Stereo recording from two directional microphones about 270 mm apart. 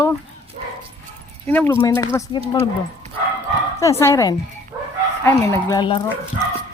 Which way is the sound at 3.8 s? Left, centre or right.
Centre.